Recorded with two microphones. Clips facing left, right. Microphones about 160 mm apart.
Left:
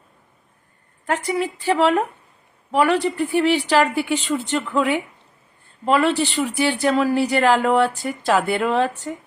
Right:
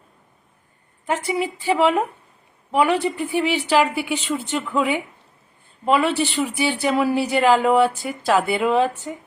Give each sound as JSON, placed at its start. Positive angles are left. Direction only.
{"t": 1.0, "sound": "speech", "side_deg": -15}
{"t": 1.7, "sound": "speech", "side_deg": -5}
{"t": 4.4, "sound": "speech", "side_deg": 0}
{"t": 4.8, "sound": "speech", "side_deg": -15}
{"t": 7.6, "sound": "speech", "side_deg": -5}
{"t": 8.7, "sound": "speech", "side_deg": -15}